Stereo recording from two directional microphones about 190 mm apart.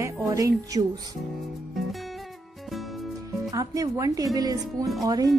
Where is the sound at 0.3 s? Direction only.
15° right (ahead or behind).